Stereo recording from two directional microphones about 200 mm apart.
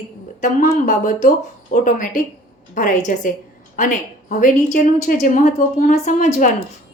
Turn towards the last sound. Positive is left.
turn(degrees=40)  # may be behind; listen again after turning